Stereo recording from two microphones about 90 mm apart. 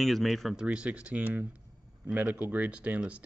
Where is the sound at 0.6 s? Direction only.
15° right (ahead or behind).